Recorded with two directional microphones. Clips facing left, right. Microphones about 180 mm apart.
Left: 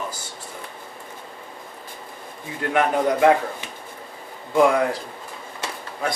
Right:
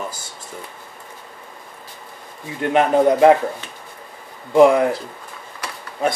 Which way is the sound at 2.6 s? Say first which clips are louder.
Right 5 dB; 25° right (ahead or behind).